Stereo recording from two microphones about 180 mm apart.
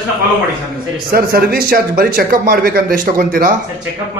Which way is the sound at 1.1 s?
55° right (ahead or behind).